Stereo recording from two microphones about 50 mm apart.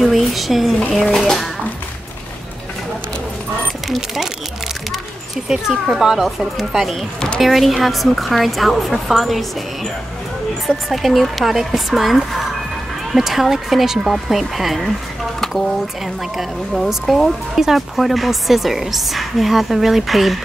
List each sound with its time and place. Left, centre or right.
0.0 s a woman's voice: centre
1.2 s a woman's voice: centre
3.9 s speech: centre
5.5 s a woman's voice: centre
7.2 s a woman's voice: centre
7.4 s a woman's voice: centre
10.9 s a woman's voice: centre
17.6 s a woman's voice: centre